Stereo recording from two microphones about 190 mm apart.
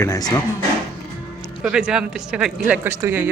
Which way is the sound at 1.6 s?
5° right (ahead or behind).